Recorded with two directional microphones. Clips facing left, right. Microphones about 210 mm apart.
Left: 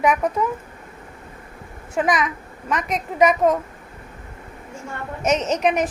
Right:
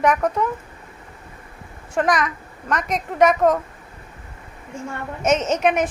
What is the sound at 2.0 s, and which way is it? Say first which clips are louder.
Speech: right 1 dB; centre (ahead or behind).